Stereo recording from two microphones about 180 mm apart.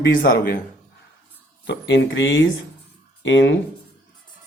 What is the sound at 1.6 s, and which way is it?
Speech, 80° left.